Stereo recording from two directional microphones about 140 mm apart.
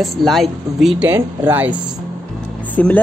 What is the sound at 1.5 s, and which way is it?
Speech, 10° right (ahead or behind).